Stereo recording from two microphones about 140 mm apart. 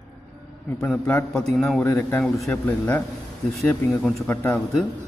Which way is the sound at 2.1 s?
Centre (ahead or behind).